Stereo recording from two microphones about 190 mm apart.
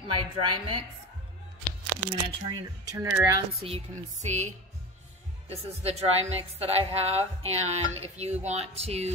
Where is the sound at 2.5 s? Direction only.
15° right (ahead or behind).